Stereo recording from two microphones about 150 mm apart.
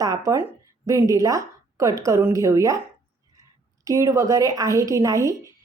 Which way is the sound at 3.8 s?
20° right (ahead or behind).